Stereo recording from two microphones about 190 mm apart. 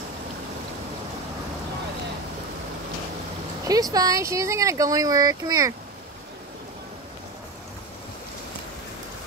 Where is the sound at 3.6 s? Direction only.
20° right (ahead or behind).